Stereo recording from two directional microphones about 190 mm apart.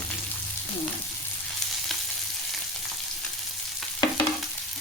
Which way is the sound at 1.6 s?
Centre (ahead or behind).